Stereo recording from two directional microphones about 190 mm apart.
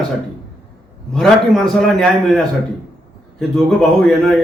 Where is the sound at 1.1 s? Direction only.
Centre (ahead or behind).